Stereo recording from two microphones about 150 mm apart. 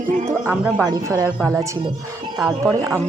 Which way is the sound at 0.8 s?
25° right (ahead or behind).